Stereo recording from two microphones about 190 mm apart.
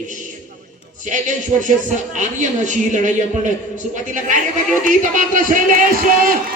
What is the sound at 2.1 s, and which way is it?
A man's voice, 40° right (ahead or behind).